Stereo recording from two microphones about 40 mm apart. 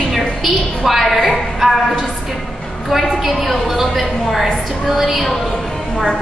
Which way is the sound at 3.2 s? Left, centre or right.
Centre.